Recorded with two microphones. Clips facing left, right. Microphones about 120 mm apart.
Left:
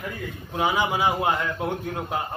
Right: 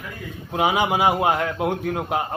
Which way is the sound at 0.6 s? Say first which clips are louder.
Right 3 dB; 65° right (ahead or behind).